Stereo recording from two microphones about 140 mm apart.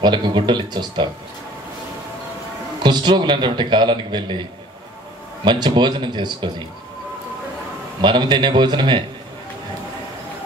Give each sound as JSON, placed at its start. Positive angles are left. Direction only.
{"t": 0.0, "sound": "a man's voice", "side_deg": -35}
{"t": 2.8, "sound": "a man's voice", "side_deg": -30}
{"t": 5.4, "sound": "a man's voice", "side_deg": -30}
{"t": 8.0, "sound": "a man's voice", "side_deg": -30}